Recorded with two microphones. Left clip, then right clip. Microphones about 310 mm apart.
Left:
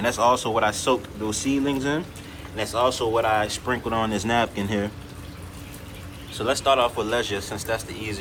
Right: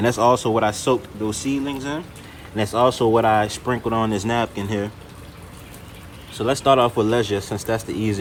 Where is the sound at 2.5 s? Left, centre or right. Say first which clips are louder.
Right 4 dB; right.